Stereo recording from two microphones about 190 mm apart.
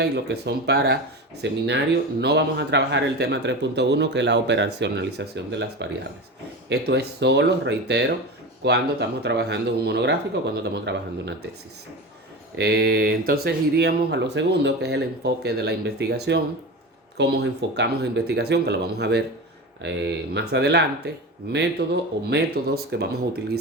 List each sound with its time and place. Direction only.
0.0 s speech: 60° right (ahead or behind)
12.5 s speech: 55° right (ahead or behind)